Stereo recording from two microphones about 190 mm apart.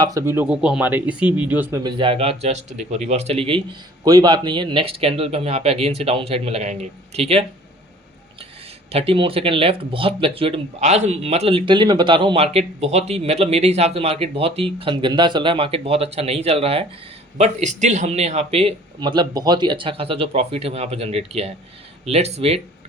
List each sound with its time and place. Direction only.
0.0 s speech: 15° right (ahead or behind)
1.8 s speech: 25° right (ahead or behind)
8.9 s speech: 30° right (ahead or behind)